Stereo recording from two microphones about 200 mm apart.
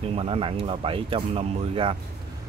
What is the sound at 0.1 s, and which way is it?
Speech, 30° right (ahead or behind).